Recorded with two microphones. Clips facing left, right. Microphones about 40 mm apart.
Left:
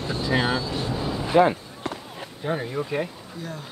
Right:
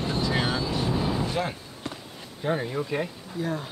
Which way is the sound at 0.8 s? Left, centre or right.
Centre.